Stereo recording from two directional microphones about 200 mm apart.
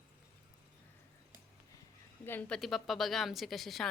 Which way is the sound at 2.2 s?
10° left (ahead or behind).